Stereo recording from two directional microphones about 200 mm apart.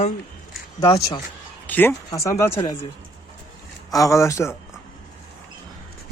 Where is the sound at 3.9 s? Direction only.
15° left (ahead or behind).